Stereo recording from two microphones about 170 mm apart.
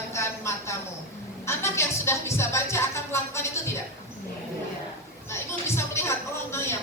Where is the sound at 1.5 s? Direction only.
15° left (ahead or behind).